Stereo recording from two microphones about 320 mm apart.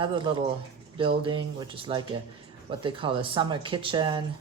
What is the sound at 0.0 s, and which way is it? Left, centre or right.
Speech, centre.